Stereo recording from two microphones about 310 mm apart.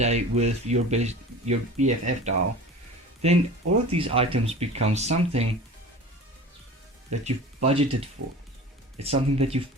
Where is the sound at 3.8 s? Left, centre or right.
Centre.